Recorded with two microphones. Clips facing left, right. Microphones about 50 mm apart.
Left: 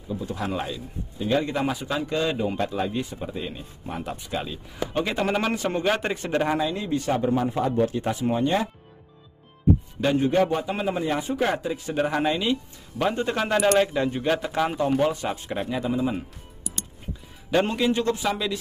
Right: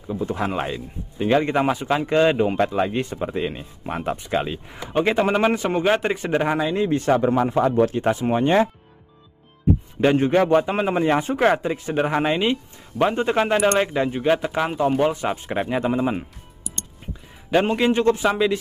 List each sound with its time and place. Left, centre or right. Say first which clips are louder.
0.1 s speech: right 4 dB; right
5.1 s speech: right 6 dB; centre
6.9 s speech: right 6 dB; right
7.2 s a man's voice: right 5 dB; right
7.9 s speech: right 4 dB; right
10.1 s speech: right 1 dB; right
10.5 s speech: right 7 dB; right
11.3 s speech: right 6 dB; right; by 14.8 s centre
15.0 s speech: right 4 dB; right
15.6 s speech: right 4 dB; right
17.5 s speech: right 3 dB; right